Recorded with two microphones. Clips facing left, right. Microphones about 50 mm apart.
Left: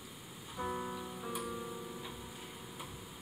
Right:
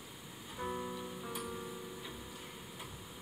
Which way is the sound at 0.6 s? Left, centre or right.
Centre.